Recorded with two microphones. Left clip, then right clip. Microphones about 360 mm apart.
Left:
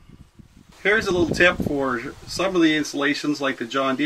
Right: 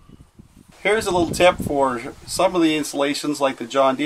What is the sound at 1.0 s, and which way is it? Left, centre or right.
Speech, centre.